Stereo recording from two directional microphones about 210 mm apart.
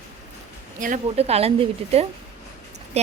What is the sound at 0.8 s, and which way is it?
A woman's voice, 35° right (ahead or behind).